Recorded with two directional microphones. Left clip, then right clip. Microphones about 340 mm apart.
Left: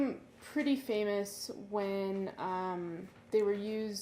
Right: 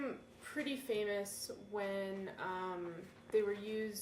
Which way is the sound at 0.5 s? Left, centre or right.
Centre.